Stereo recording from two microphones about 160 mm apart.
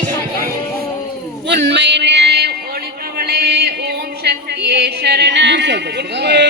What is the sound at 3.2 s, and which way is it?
Music, 75° right (ahead or behind).